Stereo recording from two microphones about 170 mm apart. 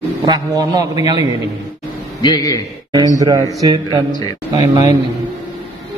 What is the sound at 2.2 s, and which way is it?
Speech, 20° left (ahead or behind).